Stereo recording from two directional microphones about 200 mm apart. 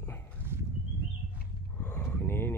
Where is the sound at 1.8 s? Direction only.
5° left (ahead or behind).